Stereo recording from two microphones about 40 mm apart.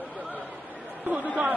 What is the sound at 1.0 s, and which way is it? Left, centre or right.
Chatter, right.